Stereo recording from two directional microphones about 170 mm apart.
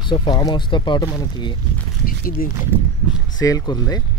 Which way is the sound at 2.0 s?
55° left (ahead or behind).